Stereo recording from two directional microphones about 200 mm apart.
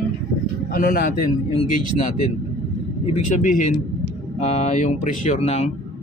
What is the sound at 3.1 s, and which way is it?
Speech, 40° left (ahead or behind).